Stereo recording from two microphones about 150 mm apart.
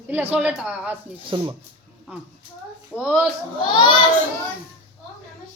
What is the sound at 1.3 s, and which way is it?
Speech, 30° right (ahead or behind).